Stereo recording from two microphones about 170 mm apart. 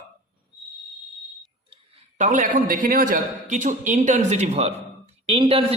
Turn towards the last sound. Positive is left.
turn(degrees=-35)  # may be behind; listen again after turning